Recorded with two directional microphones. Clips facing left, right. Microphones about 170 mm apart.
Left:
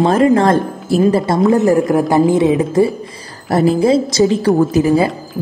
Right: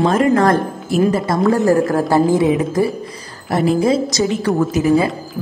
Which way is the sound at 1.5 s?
20° left (ahead or behind).